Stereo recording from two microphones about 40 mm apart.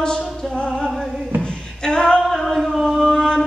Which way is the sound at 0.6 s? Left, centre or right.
Left.